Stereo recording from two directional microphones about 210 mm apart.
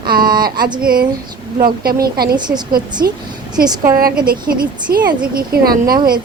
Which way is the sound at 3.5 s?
20° right (ahead or behind).